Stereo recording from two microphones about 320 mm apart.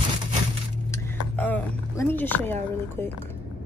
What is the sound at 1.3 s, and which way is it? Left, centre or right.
Speech, centre.